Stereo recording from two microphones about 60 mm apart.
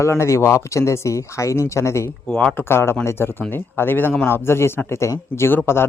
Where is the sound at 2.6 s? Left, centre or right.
Left.